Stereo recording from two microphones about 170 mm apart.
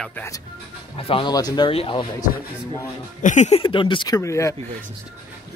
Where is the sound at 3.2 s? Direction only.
45° left (ahead or behind); by 4.5 s 20° left (ahead or behind).